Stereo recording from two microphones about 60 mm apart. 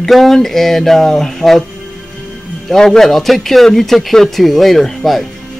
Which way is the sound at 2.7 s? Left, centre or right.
Centre.